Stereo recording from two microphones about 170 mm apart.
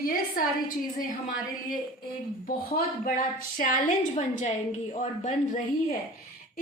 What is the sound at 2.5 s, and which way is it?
A woman's voice, 55° left (ahead or behind).